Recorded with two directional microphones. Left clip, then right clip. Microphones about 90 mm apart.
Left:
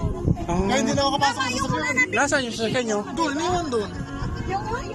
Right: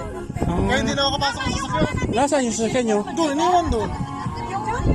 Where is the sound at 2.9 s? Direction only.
40° right (ahead or behind).